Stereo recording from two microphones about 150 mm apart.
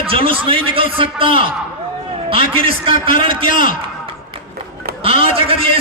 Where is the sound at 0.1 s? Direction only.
35° right (ahead or behind).